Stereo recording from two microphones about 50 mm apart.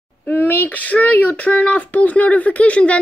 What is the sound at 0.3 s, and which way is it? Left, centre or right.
Speech, left.